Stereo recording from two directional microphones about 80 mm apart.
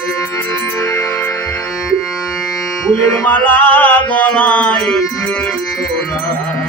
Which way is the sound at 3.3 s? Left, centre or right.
Centre.